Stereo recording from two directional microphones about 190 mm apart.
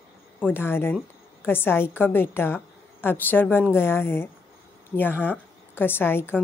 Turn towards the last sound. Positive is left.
turn(degrees=10)  # may be behind; listen again after turning